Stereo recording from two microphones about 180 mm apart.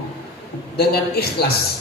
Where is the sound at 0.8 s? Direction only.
60° left (ahead or behind).